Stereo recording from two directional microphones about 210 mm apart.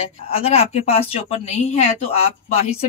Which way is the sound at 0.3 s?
30° left (ahead or behind).